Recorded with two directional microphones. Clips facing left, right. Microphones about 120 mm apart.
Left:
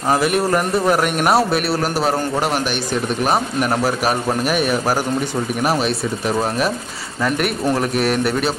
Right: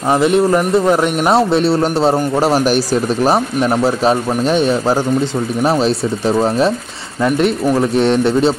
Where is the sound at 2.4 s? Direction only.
35° right (ahead or behind).